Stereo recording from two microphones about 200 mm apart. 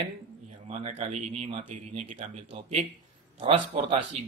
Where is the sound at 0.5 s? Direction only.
35° right (ahead or behind).